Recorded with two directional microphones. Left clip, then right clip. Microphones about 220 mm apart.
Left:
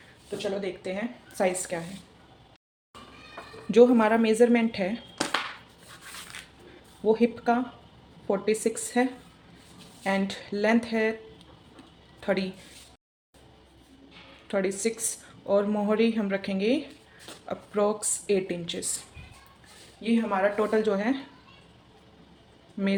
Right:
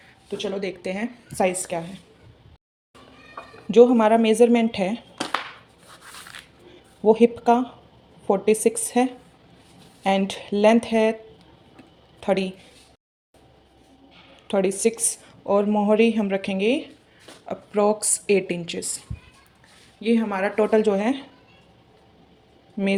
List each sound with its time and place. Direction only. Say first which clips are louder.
0.3 s speech: right 3 dB; 40° right (ahead or behind); by 1.8 s 25° right (ahead or behind)
3.7 s a woman's voice: right 4 dB; 10° right (ahead or behind)
7.0 s a woman's voice: right 7 dB; 25° right (ahead or behind)
12.2 s a woman's voice: right 5 dB; 20° right (ahead or behind)
14.4 s a woman's voice: right 6 dB; 25° right (ahead or behind)
20.0 s a woman's voice: right 3 dB; 45° right (ahead or behind); by 21.2 s 25° right (ahead or behind)